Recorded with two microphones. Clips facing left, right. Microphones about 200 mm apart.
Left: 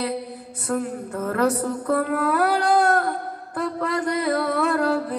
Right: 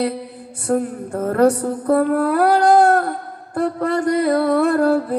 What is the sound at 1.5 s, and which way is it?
Mantra, 30° right (ahead or behind).